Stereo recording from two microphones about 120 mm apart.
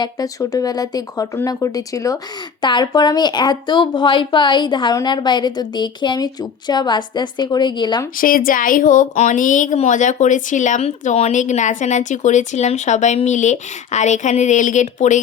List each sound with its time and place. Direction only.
0.0 s a woman's voice: 30° left (ahead or behind)
2.6 s a woman's voice: 40° left (ahead or behind)
8.5 s speech: 90° left
13.2 s speech: 90° left